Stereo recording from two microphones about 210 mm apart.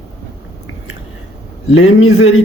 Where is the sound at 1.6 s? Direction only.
75° left (ahead or behind).